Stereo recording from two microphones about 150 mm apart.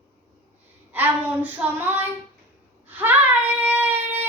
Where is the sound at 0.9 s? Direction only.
10° right (ahead or behind).